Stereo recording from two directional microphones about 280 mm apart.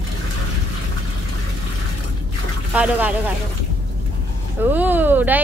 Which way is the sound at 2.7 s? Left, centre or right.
Centre.